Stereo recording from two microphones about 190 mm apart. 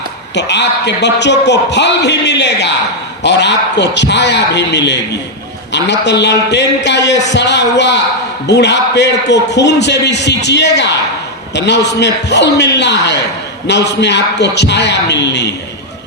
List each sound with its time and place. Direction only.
0.3 s a man's voice: 65° left (ahead or behind)